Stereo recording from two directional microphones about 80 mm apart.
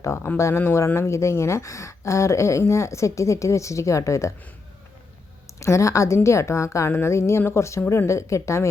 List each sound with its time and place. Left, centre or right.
0.0 s speech: left
5.5 s speech: left